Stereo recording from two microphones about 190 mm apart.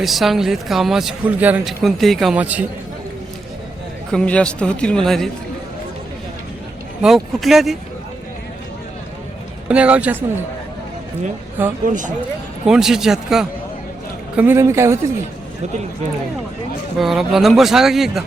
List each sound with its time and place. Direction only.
0.0 s speech: centre (ahead or behind)
4.1 s speech: 5° left (ahead or behind)
7.0 s speech: centre (ahead or behind)
9.6 s a man's voice: 5° right (ahead or behind)
11.9 s speech: 40° right (ahead or behind)
12.6 s a man's voice: 5° right (ahead or behind)
17.0 s speech: centre (ahead or behind)